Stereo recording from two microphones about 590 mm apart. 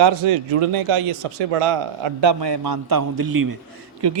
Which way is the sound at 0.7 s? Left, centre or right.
Right.